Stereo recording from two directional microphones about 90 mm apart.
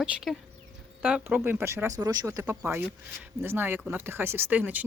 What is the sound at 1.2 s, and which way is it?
Speech, 25° right (ahead or behind).